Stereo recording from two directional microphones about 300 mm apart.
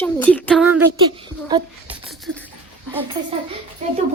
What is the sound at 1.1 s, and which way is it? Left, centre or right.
Speech, centre.